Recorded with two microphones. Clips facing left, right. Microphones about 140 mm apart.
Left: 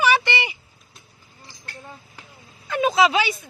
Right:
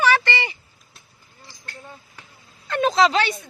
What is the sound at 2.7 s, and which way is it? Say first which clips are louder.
Speech: even; 5° left (ahead or behind).